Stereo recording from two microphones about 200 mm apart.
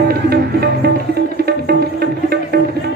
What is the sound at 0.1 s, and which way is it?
Music, 50° right (ahead or behind).